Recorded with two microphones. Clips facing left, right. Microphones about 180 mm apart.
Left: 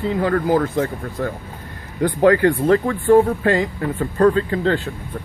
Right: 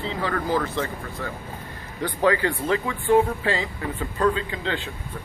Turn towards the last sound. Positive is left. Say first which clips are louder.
# left 7 dB
turn(degrees=45)  # may be behind; listen again after turning